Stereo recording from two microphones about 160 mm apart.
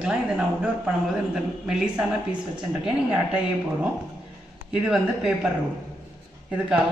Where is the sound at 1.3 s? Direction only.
5° right (ahead or behind).